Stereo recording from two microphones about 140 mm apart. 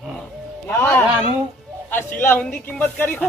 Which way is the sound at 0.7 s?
15° left (ahead or behind).